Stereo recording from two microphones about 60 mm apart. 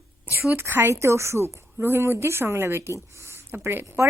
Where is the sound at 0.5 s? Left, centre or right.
Right.